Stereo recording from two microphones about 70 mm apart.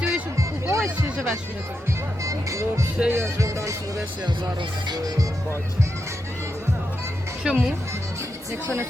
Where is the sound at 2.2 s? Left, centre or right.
Right.